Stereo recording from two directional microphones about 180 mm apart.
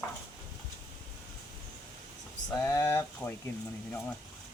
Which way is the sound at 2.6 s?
10° left (ahead or behind).